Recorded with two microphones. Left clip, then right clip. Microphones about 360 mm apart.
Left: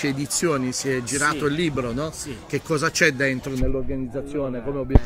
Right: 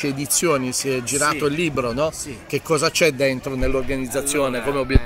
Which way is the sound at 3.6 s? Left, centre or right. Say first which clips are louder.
Right 7 dB; right.